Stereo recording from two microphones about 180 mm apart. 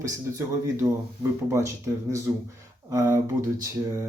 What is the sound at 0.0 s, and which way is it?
Speech, 15° right (ahead or behind).